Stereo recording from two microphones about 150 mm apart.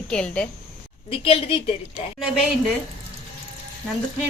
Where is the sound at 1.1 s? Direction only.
40° left (ahead or behind).